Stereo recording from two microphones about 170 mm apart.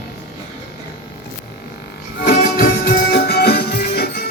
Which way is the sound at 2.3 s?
65° left (ahead or behind).